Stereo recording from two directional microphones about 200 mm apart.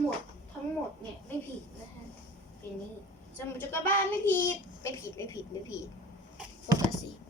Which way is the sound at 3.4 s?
10° left (ahead or behind).